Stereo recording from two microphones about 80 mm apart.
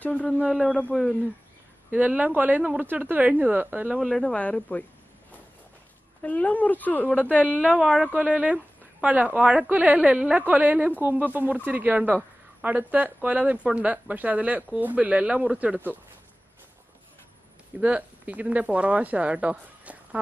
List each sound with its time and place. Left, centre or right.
0.0 s speech: centre
1.9 s speech: centre
4.2 s speech: centre
6.2 s a woman's voice: centre
7.8 s speech: centre
17.7 s speech: centre